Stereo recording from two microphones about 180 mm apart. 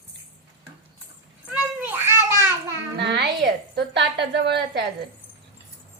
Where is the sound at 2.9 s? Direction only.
70° right (ahead or behind).